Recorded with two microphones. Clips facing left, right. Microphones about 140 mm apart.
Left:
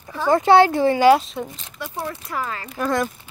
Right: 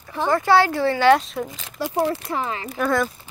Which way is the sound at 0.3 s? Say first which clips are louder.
Left 4 dB; 20° left (ahead or behind).